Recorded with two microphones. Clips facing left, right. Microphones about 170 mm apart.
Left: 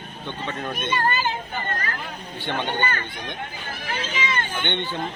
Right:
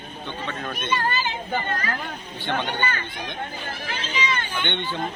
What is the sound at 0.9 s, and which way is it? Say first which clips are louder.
Speech: left 1 dB; 50° left (ahead or behind).